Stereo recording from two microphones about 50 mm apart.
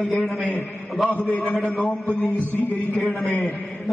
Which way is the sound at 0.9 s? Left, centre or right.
Centre.